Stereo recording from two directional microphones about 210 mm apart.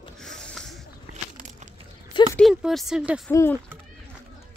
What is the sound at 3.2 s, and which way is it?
Speech, 10° left (ahead or behind).